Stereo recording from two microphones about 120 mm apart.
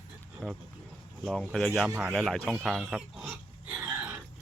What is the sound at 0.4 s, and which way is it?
Speech, 10° left (ahead or behind).